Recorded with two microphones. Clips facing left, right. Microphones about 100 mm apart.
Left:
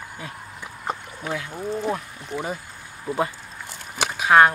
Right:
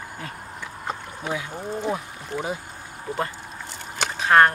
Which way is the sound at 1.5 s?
Centre (ahead or behind).